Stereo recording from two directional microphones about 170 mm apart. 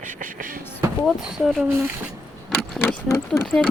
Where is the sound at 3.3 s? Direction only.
Centre (ahead or behind).